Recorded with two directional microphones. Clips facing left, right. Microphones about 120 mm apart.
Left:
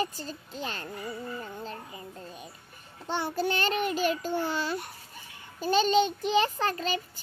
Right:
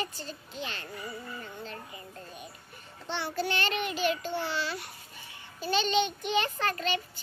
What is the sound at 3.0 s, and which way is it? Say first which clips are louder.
Child singing: left 3 dB; 45° left (ahead or behind).